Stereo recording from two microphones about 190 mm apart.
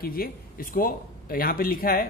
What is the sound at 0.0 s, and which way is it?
Speech, 50° left (ahead or behind).